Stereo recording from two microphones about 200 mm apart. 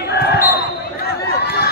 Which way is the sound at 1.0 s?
50° left (ahead or behind).